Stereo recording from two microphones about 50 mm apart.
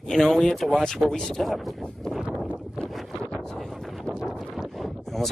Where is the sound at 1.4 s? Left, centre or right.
Centre.